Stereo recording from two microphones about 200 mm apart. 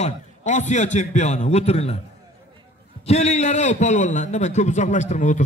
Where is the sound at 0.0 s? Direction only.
35° left (ahead or behind).